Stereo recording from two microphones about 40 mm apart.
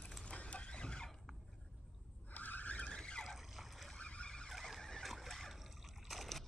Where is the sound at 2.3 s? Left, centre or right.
Left.